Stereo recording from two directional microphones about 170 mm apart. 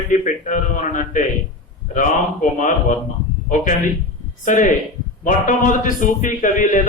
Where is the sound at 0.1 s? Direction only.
45° left (ahead or behind).